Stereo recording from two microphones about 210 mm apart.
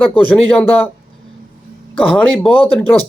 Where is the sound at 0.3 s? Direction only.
5° left (ahead or behind).